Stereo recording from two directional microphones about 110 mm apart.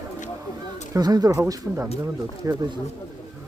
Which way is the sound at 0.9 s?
35° right (ahead or behind).